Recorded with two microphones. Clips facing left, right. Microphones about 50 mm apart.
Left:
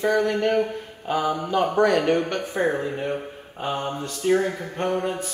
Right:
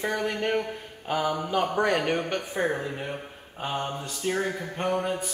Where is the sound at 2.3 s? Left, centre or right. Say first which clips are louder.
Left 4 dB; centre.